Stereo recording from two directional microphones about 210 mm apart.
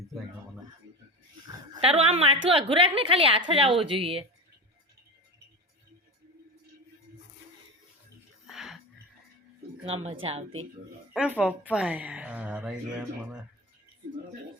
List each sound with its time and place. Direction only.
1.5 s dog: 25° right (ahead or behind)
2.5 s a woman's voice: 25° right (ahead or behind)
8.4 s music: centre (ahead or behind)
9.8 s a woman's voice: 30° right (ahead or behind)
11.1 s a woman's voice: 5° right (ahead or behind)